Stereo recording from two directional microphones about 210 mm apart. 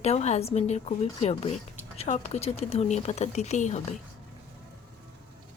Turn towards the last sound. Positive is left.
turn(degrees=35)  # may be behind; listen again after turning